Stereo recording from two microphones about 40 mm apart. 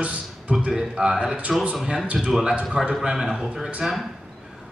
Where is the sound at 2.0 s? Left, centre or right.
Right.